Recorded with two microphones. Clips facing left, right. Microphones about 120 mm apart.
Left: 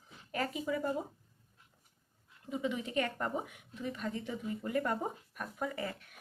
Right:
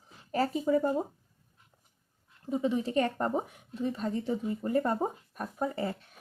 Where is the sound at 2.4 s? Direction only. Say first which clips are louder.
Right 7 dB; 35° right (ahead or behind).